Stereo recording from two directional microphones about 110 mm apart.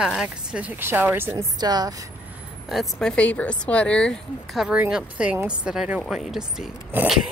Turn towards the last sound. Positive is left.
turn(degrees=-20)  # may be behind; listen again after turning